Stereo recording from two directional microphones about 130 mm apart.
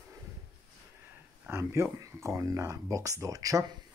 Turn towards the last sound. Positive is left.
turn(degrees=-25)  # may be behind; listen again after turning